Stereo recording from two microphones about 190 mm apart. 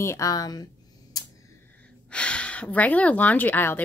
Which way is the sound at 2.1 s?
5° left (ahead or behind).